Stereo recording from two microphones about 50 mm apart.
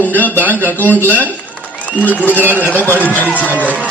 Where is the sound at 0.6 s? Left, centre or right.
Right.